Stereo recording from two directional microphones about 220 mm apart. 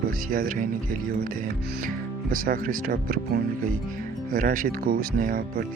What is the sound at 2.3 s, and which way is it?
Speech, 40° right (ahead or behind).